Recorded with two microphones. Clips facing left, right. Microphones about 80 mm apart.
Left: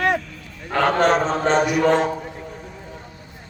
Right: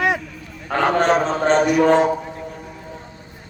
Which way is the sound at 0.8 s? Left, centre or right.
Centre.